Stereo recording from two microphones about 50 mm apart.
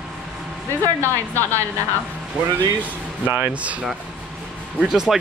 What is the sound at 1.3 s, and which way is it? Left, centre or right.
Speech, left.